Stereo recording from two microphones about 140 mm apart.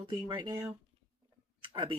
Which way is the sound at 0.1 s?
30° right (ahead or behind).